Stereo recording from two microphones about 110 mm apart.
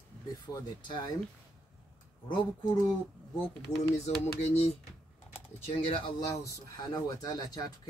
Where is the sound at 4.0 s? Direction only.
80° left; by 6.1 s 55° left (ahead or behind).